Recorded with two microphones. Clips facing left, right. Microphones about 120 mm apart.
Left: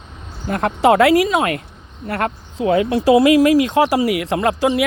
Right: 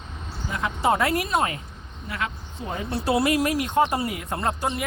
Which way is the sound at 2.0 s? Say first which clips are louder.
Left 9 dB; 60° left (ahead or behind).